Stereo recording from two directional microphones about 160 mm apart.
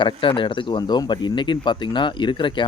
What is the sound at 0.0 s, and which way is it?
Speech, 30° left (ahead or behind).